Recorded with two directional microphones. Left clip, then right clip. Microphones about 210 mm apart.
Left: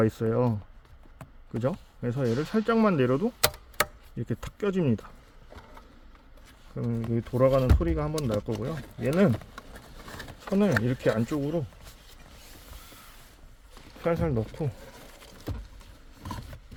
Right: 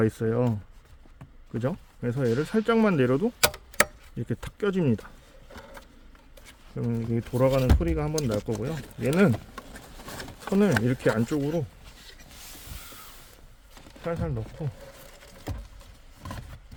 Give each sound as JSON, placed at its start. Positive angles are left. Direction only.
{"t": 0.0, "sound": "speech", "side_deg": 0}
{"t": 6.7, "sound": "speech", "side_deg": -5}
{"t": 8.6, "sound": "speech", "side_deg": -10}
{"t": 10.5, "sound": "speech", "side_deg": -5}
{"t": 14.0, "sound": "speech", "side_deg": 40}